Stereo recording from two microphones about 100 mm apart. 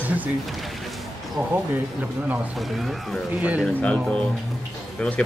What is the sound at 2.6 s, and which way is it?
Speech, centre (ahead or behind).